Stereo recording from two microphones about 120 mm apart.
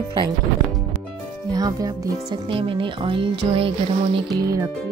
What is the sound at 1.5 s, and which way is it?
Speech, 30° right (ahead or behind).